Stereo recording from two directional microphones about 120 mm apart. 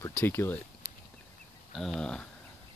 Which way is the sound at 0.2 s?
20° left (ahead or behind).